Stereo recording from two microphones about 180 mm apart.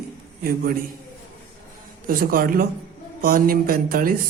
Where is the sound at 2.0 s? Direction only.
50° right (ahead or behind).